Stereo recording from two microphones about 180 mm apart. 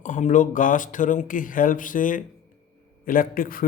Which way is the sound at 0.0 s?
45° left (ahead or behind).